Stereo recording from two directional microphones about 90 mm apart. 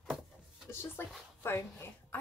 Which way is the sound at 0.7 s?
25° left (ahead or behind).